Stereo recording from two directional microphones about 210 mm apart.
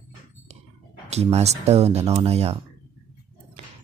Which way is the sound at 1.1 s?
30° right (ahead or behind).